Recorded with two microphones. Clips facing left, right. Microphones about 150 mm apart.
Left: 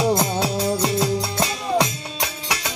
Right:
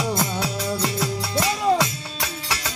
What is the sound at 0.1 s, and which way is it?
Music, 25° left (ahead or behind).